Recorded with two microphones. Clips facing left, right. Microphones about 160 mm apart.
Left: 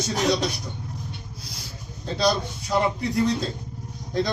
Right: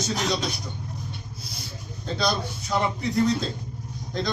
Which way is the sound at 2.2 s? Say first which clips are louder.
Left 4 dB; 35° left (ahead or behind).